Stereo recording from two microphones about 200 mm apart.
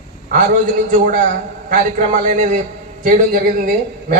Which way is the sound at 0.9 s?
40° right (ahead or behind).